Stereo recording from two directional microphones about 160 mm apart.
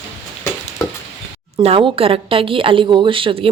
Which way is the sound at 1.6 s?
35° right (ahead or behind).